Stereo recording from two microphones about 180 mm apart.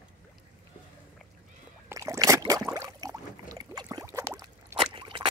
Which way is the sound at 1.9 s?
20° right (ahead or behind).